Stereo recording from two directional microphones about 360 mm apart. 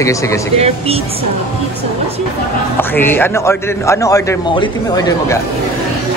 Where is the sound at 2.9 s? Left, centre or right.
Centre.